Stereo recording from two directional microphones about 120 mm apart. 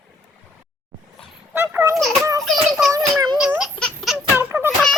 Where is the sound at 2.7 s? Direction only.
5° right (ahead or behind).